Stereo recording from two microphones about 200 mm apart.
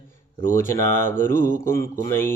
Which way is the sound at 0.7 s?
15° left (ahead or behind).